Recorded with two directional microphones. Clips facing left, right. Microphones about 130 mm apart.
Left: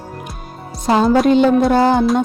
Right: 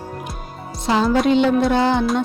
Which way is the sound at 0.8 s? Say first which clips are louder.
Left 4 dB; 45° left (ahead or behind).